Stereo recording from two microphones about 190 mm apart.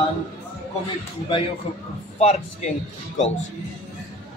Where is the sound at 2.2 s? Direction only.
35° left (ahead or behind).